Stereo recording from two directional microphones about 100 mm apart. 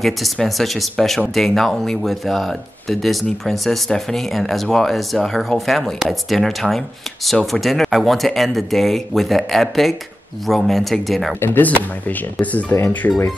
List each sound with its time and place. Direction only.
0.0 s speech: centre (ahead or behind)
11.3 s speech: 20° left (ahead or behind)